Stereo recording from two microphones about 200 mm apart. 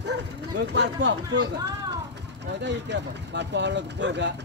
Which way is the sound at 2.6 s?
60° right (ahead or behind).